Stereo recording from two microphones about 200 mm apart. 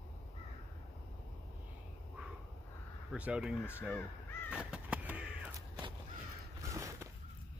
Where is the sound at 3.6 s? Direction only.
10° left (ahead or behind).